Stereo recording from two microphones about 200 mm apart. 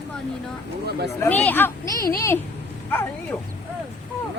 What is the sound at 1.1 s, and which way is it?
A woman's voice, 10° left (ahead or behind).